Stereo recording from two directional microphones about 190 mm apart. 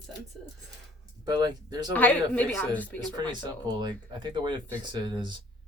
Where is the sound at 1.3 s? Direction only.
20° right (ahead or behind).